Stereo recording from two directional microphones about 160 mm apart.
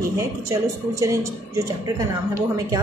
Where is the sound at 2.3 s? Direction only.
20° right (ahead or behind).